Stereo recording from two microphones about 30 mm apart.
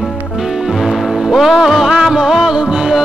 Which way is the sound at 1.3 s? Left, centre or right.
Centre.